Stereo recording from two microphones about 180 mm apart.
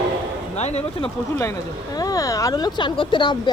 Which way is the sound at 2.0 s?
20° left (ahead or behind).